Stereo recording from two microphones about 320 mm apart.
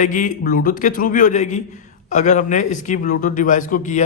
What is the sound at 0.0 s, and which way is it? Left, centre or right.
A man's voice, left.